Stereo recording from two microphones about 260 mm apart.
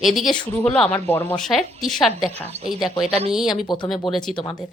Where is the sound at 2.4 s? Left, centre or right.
Right.